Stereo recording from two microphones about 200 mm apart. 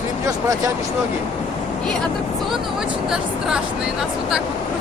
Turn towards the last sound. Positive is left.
turn(degrees=-5)  # may be behind; listen again after turning